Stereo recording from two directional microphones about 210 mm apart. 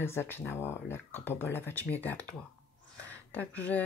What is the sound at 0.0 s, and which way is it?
Speech, 10° left (ahead or behind).